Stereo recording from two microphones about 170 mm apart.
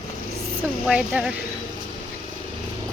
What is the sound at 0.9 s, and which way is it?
Speech, 5° right (ahead or behind).